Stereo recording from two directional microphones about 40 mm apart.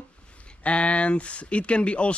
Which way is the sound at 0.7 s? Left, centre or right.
Left.